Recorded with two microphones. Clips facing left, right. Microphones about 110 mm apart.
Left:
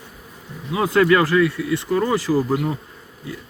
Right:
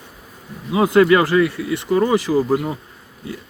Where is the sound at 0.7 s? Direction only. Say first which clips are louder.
Right 3 dB; 20° right (ahead or behind).